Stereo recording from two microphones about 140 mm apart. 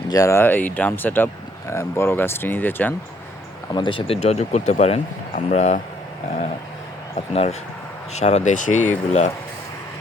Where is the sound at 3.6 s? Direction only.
35° left (ahead or behind); by 5.8 s 60° left (ahead or behind).